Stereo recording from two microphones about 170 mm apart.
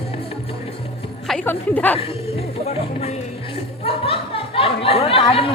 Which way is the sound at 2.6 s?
35° left (ahead or behind).